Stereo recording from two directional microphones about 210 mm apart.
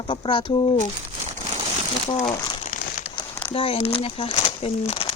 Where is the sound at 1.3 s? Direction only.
25° right (ahead or behind).